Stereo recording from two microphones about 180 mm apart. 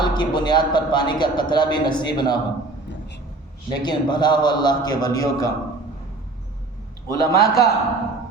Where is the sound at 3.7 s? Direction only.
25° left (ahead or behind).